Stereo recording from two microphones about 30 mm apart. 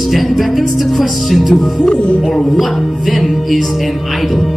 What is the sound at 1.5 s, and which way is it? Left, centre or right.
Speech, left.